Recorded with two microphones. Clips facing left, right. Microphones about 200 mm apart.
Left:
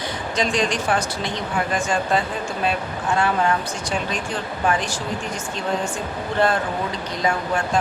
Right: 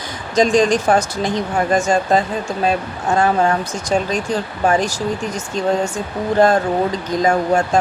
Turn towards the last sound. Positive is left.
turn(degrees=-45)  # may be behind; listen again after turning